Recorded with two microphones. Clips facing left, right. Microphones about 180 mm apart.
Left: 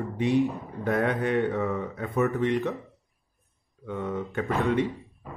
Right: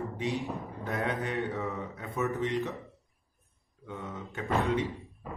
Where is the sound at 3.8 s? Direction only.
60° left (ahead or behind).